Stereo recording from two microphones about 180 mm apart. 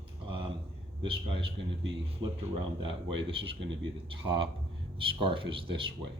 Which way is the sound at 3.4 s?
30° right (ahead or behind).